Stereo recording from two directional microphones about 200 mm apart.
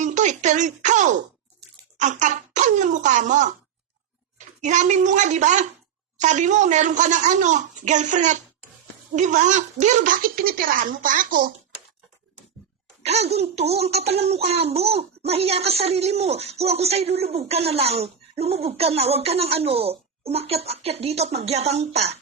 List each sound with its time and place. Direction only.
0.0 s a sound: 35° right (ahead or behind)
2.0 s speech: 35° right (ahead or behind)
13.0 s speech: 30° right (ahead or behind)